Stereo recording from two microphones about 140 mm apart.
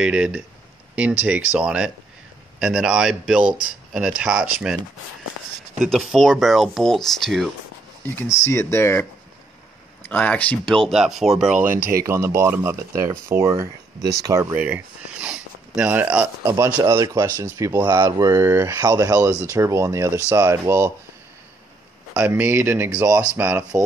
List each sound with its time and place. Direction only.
0.0 s speech: 10° right (ahead or behind)
5.8 s speech: centre (ahead or behind)
8.0 s speech: 15° left (ahead or behind)
10.0 s speech: 10° left (ahead or behind)
12.0 s speech: 20° right (ahead or behind)
22.1 s speech: 15° right (ahead or behind)